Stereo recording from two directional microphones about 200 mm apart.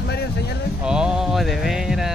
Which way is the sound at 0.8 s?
5° right (ahead or behind).